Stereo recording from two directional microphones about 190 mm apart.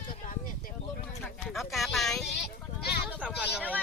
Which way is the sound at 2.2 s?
65° left (ahead or behind).